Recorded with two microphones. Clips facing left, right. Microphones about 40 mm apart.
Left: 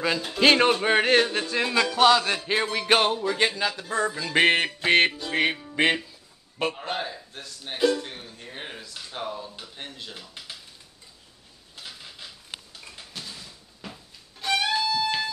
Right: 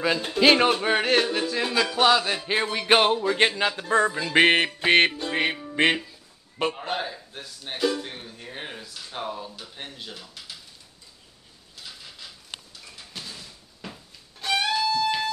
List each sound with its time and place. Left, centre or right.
0.4 s music: centre
1.9 s music: centre
3.1 s music: right
3.3 s speech: right
4.1 s a man's voice: centre
5.3 s music: centre
6.6 s a man's voice: centre
9.1 s music: centre
13.4 s cupboard open or close: centre
14.4 s music: centre